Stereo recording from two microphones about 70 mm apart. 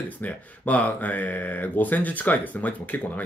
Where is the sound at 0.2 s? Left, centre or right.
Left.